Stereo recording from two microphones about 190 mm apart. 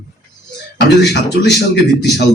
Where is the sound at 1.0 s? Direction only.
60° left (ahead or behind).